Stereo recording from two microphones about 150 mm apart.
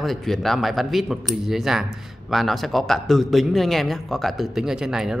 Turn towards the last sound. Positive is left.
turn(degrees=-5)  # may be behind; listen again after turning